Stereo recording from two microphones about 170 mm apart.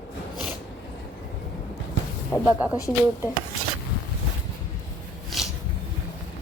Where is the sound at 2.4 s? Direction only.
10° right (ahead or behind).